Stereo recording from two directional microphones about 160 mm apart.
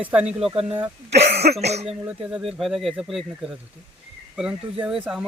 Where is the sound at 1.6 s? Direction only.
45° right (ahead or behind).